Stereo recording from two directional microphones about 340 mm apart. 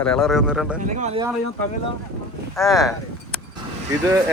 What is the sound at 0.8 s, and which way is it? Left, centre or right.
Speech, right.